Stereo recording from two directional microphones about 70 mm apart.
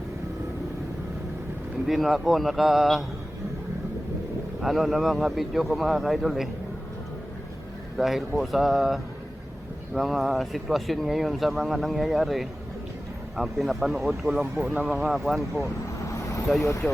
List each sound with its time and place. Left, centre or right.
1.9 s speech: centre
4.6 s speech: centre
7.9 s speech: centre
14.6 s speech: centre
14.9 s speech: centre
16.0 s vehicle: left